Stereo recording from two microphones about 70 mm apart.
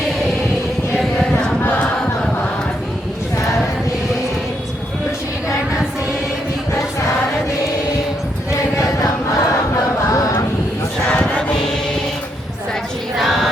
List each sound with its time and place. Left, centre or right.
8.7 s choir: left
10.1 s vehicle: left
11.1 s choir: centre
13.1 s a sound: centre